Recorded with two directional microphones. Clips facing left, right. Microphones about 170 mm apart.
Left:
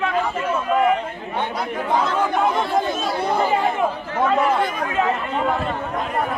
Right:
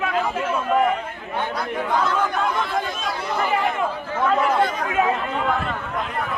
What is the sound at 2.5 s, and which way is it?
Chatter, 30° left (ahead or behind).